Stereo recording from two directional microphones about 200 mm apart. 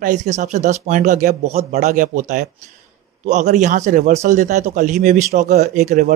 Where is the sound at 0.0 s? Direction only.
35° right (ahead or behind).